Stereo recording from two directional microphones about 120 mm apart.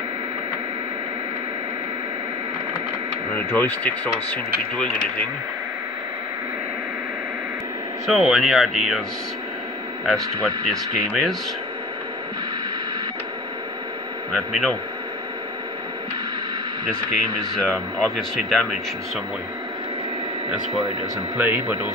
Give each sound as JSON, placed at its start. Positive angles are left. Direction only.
{"t": 3.3, "sound": "speech", "side_deg": 15}
{"t": 8.1, "sound": "speech", "side_deg": -5}
{"t": 10.0, "sound": "speech", "side_deg": 0}
{"t": 14.3, "sound": "speech", "side_deg": 5}
{"t": 17.6, "sound": "speech", "side_deg": 10}
{"t": 21.4, "sound": "speech", "side_deg": -15}